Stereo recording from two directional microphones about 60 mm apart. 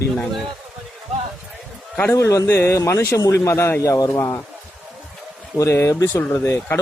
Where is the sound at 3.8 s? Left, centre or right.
Left.